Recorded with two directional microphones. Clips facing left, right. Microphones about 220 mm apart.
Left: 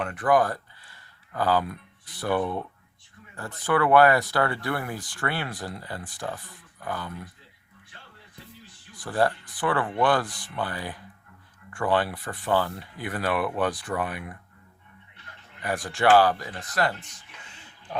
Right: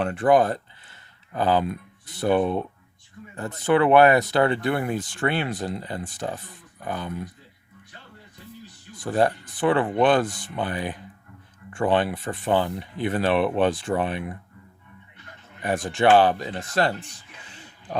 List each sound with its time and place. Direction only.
0.0 s speech: 30° right (ahead or behind)
9.0 s speech: 20° right (ahead or behind)
15.6 s speech: 20° right (ahead or behind)